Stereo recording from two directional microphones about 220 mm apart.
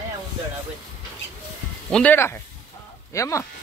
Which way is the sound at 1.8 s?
5° left (ahead or behind).